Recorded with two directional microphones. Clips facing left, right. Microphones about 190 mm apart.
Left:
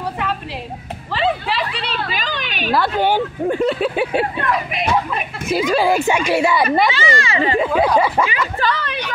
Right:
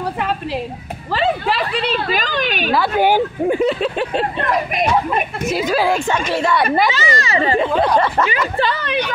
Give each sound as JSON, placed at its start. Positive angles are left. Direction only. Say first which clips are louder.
{"t": 1.1, "sound": "a woman's voice", "louder": "right 2 dB", "side_deg": -50}
{"t": 3.0, "sound": "speech", "louder": "right 2 dB", "side_deg": -10}
{"t": 3.8, "sound": "speech", "louder": "left 1 dB", "side_deg": 5}
{"t": 4.5, "sound": "a woman's voice", "louder": "right 2 dB", "side_deg": -45}
{"t": 5.5, "sound": "a woman's voice", "louder": "left 2 dB", "side_deg": 0}
{"t": 7.0, "sound": "speech", "louder": "even", "side_deg": -40}
{"t": 7.5, "sound": "speech", "louder": "left 1 dB", "side_deg": 5}
{"t": 8.5, "sound": "speech", "louder": "even", "side_deg": -25}